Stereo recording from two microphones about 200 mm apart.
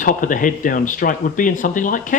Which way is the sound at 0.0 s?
40° left (ahead or behind).